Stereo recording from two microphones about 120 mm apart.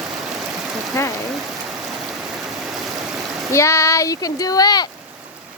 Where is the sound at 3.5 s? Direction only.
25° left (ahead or behind).